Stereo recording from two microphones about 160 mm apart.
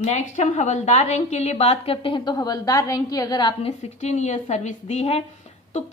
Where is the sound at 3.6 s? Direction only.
45° left (ahead or behind).